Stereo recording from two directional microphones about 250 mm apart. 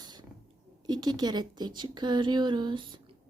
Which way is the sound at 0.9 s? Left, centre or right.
Centre.